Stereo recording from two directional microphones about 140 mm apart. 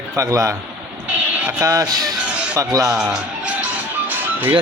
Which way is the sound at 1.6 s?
25° right (ahead or behind).